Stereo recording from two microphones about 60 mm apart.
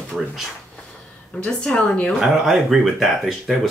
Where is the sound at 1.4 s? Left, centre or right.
Centre.